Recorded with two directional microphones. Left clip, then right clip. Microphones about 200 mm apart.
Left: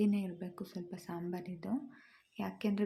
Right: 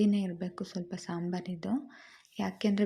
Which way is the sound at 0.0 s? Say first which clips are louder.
Right 5 dB; 20° right (ahead or behind).